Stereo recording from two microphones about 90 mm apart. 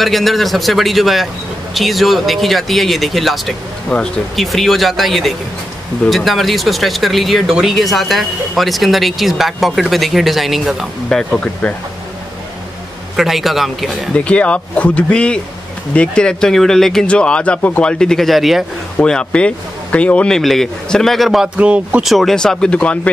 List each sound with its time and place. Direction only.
0.0 s speech: centre (ahead or behind)
11.1 s speech: 10° left (ahead or behind)
13.1 s speech: centre (ahead or behind)
14.1 s speech: 15° left (ahead or behind); by 18.7 s centre (ahead or behind)
18.9 s speech: 10° left (ahead or behind)
21.5 s speech: 15° right (ahead or behind)
22.0 s speech: centre (ahead or behind)